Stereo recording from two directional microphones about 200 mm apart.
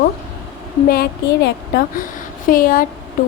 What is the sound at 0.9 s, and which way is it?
A woman's voice, 50° left (ahead or behind).